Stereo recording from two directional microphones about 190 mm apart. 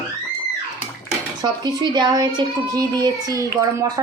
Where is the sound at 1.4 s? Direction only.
20° right (ahead or behind).